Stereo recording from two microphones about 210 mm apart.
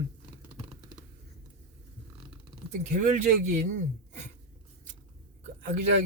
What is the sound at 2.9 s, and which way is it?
A man's voice, 40° right (ahead or behind).